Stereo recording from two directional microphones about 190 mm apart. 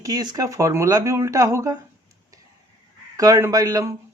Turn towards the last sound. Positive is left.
turn(degrees=-20)  # may be behind; listen again after turning